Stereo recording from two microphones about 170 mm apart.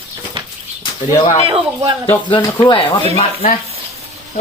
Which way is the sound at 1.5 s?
30° right (ahead or behind).